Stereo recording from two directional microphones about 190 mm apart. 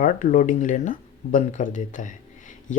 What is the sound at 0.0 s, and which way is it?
Speech, 40° left (ahead or behind).